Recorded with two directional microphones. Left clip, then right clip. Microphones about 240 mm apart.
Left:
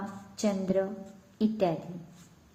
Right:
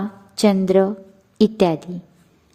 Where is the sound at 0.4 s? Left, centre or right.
Right.